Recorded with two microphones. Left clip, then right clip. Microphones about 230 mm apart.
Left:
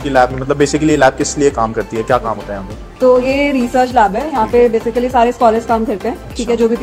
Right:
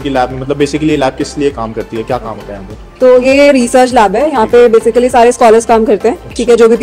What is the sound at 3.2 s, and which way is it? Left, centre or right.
Speech, right.